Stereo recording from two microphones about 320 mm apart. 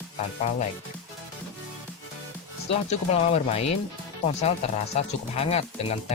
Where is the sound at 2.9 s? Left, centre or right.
Centre.